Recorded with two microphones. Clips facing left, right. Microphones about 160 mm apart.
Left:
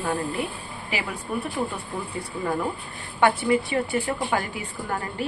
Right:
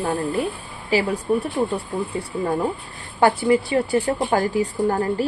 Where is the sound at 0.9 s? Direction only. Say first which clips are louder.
Right 10 dB; 35° right (ahead or behind).